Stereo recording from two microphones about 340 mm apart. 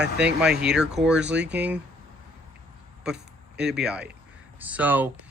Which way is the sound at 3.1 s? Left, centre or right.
Right.